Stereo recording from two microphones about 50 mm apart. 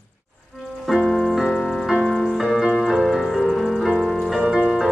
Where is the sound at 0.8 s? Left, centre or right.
Centre.